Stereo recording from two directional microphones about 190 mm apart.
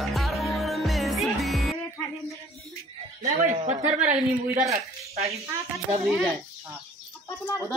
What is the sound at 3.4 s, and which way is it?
Speech, 35° right (ahead or behind).